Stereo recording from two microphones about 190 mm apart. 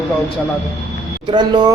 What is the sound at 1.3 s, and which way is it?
Speech, 25° right (ahead or behind).